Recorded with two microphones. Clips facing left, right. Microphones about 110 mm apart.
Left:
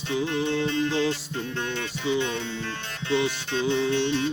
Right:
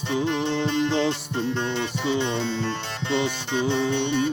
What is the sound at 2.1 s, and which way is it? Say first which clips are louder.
Music: right 1 dB; 75° right (ahead or behind).